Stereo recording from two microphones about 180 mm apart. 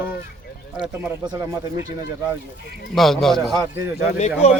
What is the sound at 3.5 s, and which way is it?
Speech, 20° right (ahead or behind).